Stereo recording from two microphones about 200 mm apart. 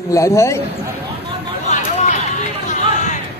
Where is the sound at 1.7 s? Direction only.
35° left (ahead or behind).